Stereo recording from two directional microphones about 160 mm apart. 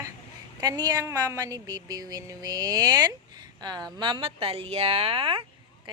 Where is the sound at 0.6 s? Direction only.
25° right (ahead or behind).